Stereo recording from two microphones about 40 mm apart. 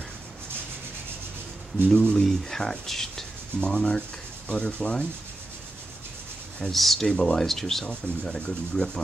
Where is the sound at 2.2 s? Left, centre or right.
Centre.